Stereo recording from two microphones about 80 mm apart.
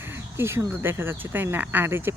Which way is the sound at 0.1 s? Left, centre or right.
Right.